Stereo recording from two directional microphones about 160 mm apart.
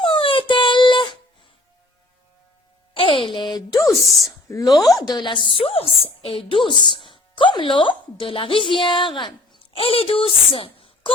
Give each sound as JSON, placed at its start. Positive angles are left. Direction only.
{"t": 0.0, "sound": "dog", "side_deg": 30}
{"t": 2.9, "sound": "a sound", "side_deg": 35}
{"t": 3.8, "sound": "a woman's voice", "side_deg": 0}
{"t": 4.4, "sound": "a woman's voice", "side_deg": 20}